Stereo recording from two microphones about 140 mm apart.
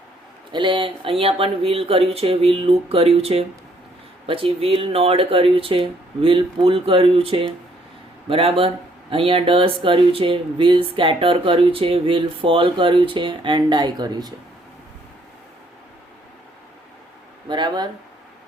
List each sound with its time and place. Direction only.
0.5 s speech: 35° right (ahead or behind)
17.5 s speech: 30° right (ahead or behind)